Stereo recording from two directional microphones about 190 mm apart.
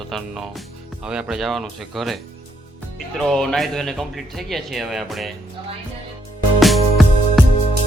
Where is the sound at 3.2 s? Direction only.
5° left (ahead or behind).